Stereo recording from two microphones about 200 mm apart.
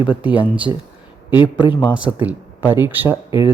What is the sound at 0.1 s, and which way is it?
Speech, 5° right (ahead or behind).